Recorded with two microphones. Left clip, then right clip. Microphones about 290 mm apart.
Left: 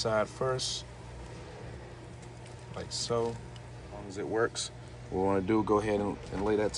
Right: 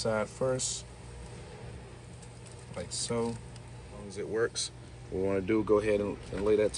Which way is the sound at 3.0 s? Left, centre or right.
Left.